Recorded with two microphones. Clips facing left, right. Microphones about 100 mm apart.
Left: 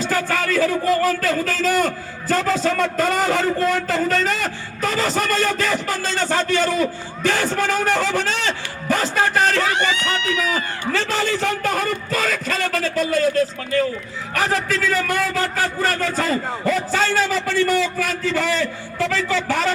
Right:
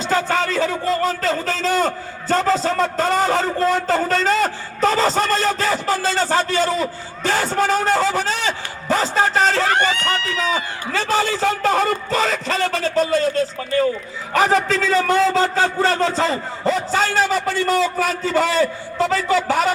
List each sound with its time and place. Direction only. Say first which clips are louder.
0.0 s a man's voice: right 2 dB; 25° right (ahead or behind)
9.6 s speech: right 2 dB; 50° right (ahead or behind); by 10.6 s 30° right (ahead or behind)
10.9 s a man's voice: right 3 dB; 20° right (ahead or behind)
14.3 s a man's voice: right 5 dB; 25° right (ahead or behind)